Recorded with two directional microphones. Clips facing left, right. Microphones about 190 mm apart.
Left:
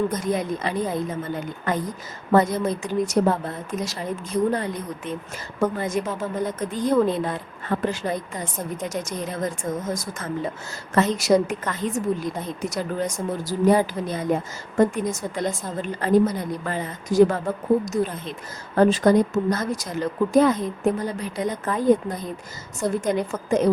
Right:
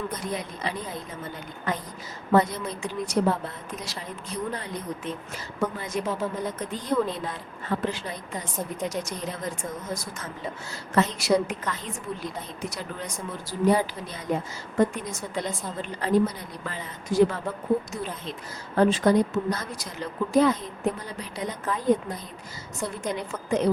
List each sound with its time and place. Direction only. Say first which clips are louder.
0.1 s a woman's voice: left 8 dB; 45° left (ahead or behind)
22.8 s a woman's voice: left 7 dB; 45° left (ahead or behind)